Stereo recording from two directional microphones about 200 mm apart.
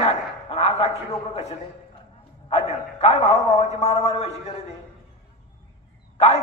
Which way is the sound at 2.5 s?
35° left (ahead or behind).